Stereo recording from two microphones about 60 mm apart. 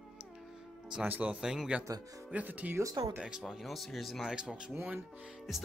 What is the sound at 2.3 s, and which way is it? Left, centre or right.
Speech, right.